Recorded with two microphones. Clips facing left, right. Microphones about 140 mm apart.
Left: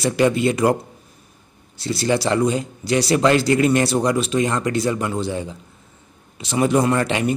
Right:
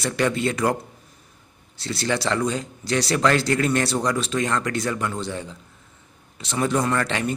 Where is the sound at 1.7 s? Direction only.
10° left (ahead or behind).